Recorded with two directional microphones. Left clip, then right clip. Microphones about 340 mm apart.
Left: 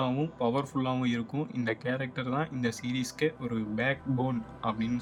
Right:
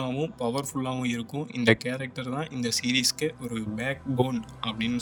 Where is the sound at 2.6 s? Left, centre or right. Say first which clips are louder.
Right 4 dB; right.